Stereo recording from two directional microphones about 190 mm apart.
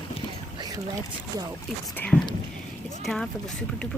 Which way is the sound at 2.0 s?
10° left (ahead or behind).